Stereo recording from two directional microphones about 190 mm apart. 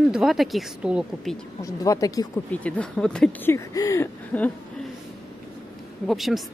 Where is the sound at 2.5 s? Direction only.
5° left (ahead or behind).